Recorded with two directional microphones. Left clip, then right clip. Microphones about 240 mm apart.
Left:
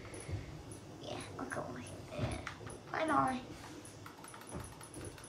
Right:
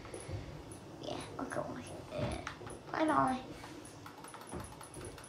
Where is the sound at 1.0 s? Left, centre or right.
Centre.